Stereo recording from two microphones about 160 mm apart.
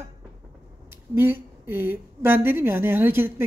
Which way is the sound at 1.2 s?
15° right (ahead or behind).